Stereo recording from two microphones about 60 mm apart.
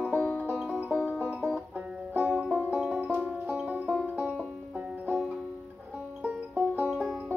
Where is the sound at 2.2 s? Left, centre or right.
Centre.